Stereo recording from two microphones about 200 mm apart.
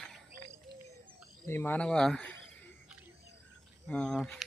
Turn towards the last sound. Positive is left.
turn(degrees=0)  # may be behind; listen again after turning